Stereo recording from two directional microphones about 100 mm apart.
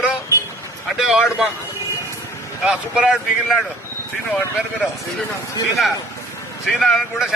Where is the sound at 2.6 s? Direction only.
10° right (ahead or behind).